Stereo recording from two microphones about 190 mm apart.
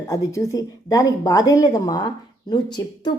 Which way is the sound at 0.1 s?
15° left (ahead or behind).